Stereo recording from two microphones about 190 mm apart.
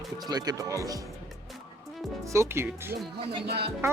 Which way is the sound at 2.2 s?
15° right (ahead or behind).